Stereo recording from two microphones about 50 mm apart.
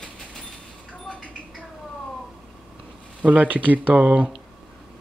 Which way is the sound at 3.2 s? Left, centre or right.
Right.